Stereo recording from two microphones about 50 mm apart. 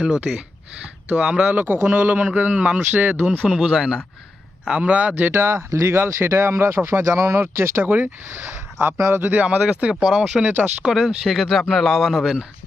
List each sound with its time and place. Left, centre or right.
0.0 s speech: centre
1.5 s a man's voice: right
2.9 s a man's voice: right
3.4 s speech: centre
4.8 s a man's voice: right
5.3 s speech: right
6.1 s speech: right
7.5 s speech: right
7.9 s a man's voice: right
9.3 s speech: right
10.1 s speech: centre
10.4 s a man's voice: right
11.3 s speech: centre